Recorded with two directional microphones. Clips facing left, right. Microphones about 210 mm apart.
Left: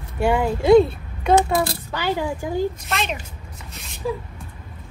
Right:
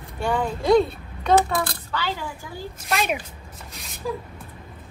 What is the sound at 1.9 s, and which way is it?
Speech, 15° left (ahead or behind).